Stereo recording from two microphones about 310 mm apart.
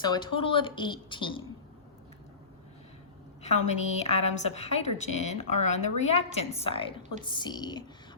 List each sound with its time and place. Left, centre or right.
0.0 s a woman's voice: centre
3.4 s a woman's voice: left